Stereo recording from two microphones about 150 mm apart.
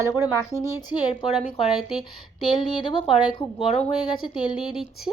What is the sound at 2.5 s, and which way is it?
Speech, 30° left (ahead or behind).